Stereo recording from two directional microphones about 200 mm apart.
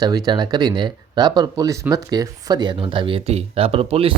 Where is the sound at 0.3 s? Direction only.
20° right (ahead or behind).